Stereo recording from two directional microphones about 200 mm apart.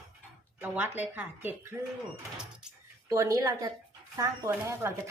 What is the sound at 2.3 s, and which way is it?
Door, 5° right (ahead or behind).